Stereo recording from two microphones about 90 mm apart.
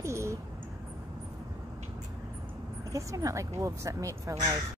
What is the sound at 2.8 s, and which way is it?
Speech, 35° right (ahead or behind).